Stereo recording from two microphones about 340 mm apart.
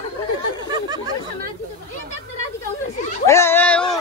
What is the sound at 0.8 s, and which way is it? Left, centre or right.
Chatter, centre.